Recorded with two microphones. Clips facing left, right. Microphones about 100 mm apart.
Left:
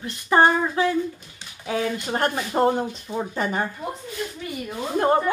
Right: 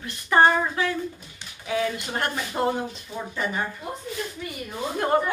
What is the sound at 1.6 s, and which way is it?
A woman's voice, 35° left (ahead or behind).